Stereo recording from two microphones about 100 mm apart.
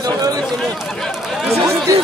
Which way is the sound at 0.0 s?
40° right (ahead or behind).